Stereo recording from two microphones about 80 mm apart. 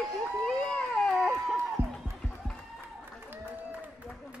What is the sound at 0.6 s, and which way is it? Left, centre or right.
Music, centre.